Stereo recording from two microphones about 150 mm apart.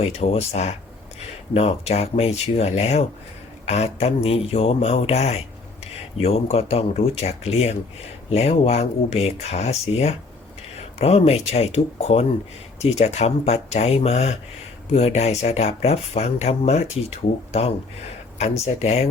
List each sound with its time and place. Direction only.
0.0 s speech: 45° left (ahead or behind)